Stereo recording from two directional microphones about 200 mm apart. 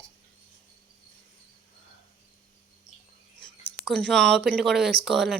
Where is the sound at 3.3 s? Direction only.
5° left (ahead or behind).